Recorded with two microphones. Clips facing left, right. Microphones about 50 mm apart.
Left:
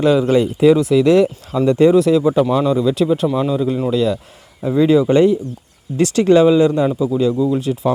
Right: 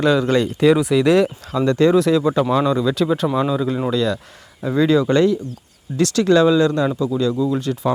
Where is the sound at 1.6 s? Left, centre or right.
Centre.